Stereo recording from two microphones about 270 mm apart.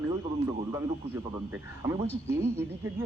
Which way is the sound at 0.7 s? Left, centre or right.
Centre.